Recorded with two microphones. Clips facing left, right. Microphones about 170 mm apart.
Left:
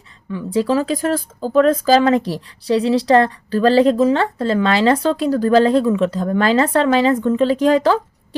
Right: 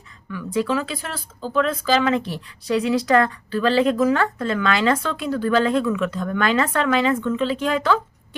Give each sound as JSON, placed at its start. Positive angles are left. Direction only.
{"t": 0.3, "sound": "speech", "side_deg": 30}